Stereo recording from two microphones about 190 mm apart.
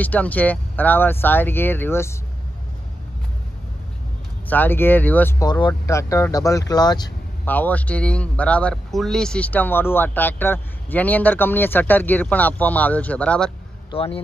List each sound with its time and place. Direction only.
0.0 s speech: 10° left (ahead or behind)
4.5 s speech: 10° left (ahead or behind)
5.4 s speech: 20° left (ahead or behind)
7.4 s speech: 10° left (ahead or behind)
13.8 s speech: 30° left (ahead or behind)